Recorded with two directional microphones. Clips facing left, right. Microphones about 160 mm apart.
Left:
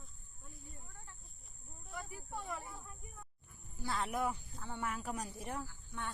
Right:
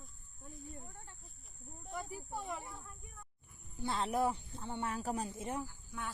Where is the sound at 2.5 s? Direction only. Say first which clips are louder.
Right 1 dB; centre (ahead or behind).